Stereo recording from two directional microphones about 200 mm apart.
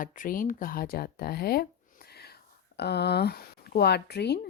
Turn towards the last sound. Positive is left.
turn(degrees=55)  # may be behind; listen again after turning